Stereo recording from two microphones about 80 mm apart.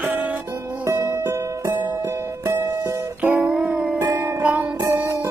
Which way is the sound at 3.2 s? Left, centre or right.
Right.